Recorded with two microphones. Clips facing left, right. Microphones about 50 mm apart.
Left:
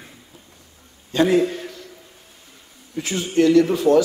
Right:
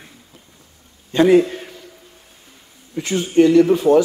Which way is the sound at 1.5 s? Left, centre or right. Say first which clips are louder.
Left 1 dB; centre.